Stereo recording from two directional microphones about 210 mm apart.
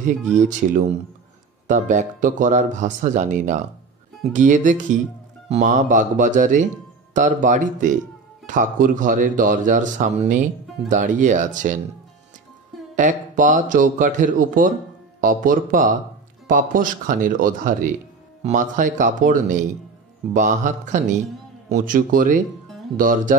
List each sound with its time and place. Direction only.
0.4 s speech: 35° right (ahead or behind)
12.9 s speech: 35° right (ahead or behind)